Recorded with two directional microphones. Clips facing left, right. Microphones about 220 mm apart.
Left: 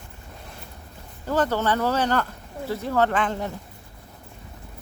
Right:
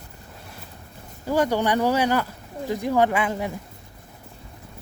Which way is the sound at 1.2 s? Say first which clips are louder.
Right 1 dB; 10° right (ahead or behind).